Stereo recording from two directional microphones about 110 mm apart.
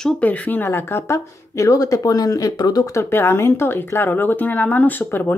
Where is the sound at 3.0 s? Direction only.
20° left (ahead or behind).